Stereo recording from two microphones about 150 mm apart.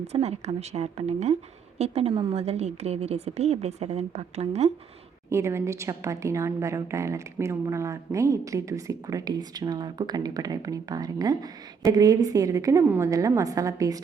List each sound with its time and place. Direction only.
0.1 s a woman's voice: 45° right (ahead or behind)
5.3 s a woman's voice: 20° right (ahead or behind)